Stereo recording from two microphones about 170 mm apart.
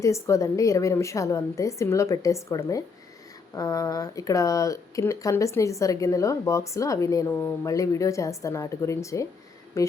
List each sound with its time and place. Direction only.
0.0 s a woman's voice: 20° left (ahead or behind)